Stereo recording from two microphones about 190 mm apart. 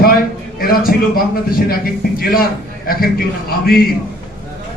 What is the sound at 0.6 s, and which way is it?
A man's voice, 50° left (ahead or behind).